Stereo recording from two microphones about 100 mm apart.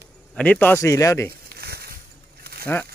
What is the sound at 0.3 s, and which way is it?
Speech, 15° left (ahead or behind).